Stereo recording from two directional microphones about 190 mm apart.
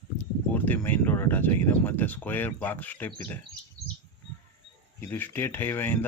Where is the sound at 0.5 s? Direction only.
10° left (ahead or behind).